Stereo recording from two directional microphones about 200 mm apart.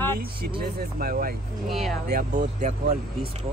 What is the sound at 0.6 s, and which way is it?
Speech, 45° right (ahead or behind).